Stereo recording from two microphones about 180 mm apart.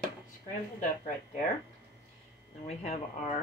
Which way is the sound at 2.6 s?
40° left (ahead or behind).